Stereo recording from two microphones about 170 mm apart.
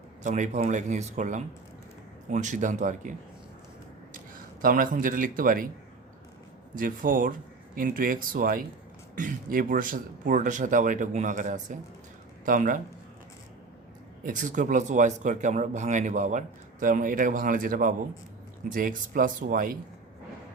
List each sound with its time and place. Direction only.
0.2 s speech: 45° right (ahead or behind)
4.6 s speech: 55° right (ahead or behind)
6.7 s speech: 55° right (ahead or behind)
14.3 s speech: 50° right (ahead or behind)